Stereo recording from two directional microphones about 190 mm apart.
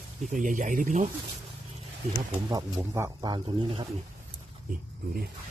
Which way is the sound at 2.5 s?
15° right (ahead or behind).